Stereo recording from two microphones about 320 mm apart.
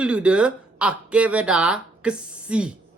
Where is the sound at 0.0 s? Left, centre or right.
Centre.